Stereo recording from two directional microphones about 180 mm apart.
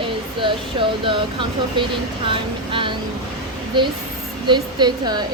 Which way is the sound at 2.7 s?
25° right (ahead or behind).